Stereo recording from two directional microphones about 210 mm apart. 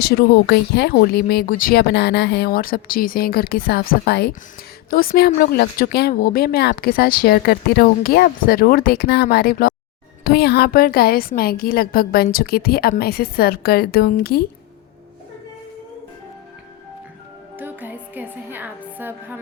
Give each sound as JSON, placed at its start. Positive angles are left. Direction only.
{"t": 0.0, "sound": "a woman's voice", "side_deg": 50}
{"t": 17.6, "sound": "music", "side_deg": -10}